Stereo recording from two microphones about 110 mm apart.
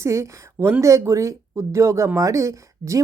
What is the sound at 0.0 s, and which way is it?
Speech, 25° right (ahead or behind).